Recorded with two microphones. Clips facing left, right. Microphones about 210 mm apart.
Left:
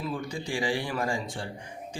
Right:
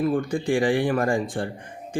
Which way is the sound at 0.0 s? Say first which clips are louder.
Right 10 dB; 55° right (ahead or behind).